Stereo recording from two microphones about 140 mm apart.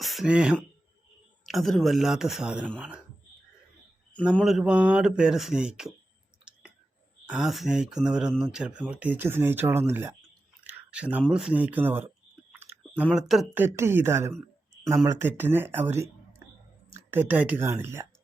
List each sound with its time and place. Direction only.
0.0 s speech: centre (ahead or behind)
4.4 s speech: 5° right (ahead or behind)
6.5 s a sound: 5° right (ahead or behind)
7.3 s speech: 5° right (ahead or behind)
10.6 s a sound: 10° right (ahead or behind)
11.3 s clicking: 5° right (ahead or behind)
13.1 s speech: centre (ahead or behind)
13.5 s speech: 15° right (ahead or behind)